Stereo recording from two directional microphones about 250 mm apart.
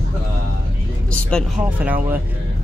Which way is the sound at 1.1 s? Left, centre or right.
Centre.